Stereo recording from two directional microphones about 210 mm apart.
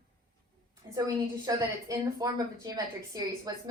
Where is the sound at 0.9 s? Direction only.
15° right (ahead or behind).